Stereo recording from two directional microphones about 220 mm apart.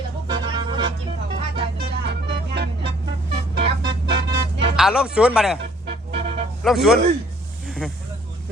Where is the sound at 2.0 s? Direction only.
50° right (ahead or behind).